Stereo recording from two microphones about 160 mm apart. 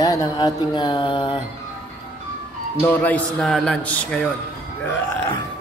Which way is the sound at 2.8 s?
10° left (ahead or behind).